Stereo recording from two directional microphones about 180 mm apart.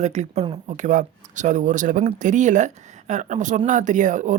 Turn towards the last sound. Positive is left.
turn(degrees=-45)  # may be behind; listen again after turning